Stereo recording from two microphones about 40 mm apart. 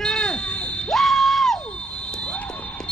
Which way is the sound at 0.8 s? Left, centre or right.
Centre.